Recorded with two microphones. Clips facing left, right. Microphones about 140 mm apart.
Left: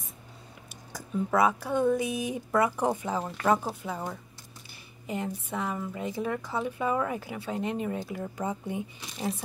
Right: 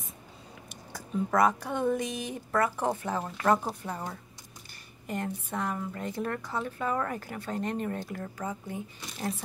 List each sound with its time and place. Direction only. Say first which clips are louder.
0.9 s a woman's voice: left 1 dB; 5° left (ahead or behind)
8.4 s speech: left 5 dB; 20° left (ahead or behind)